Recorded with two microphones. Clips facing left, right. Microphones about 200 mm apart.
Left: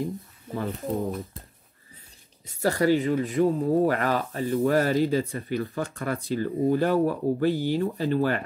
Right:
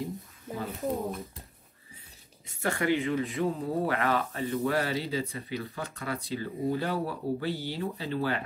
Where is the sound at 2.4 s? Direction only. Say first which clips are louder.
Left 6 dB; 40° left (ahead or behind).